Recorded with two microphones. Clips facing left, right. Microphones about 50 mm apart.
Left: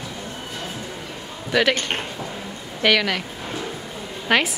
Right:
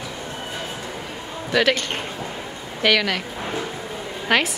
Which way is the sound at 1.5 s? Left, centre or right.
Centre.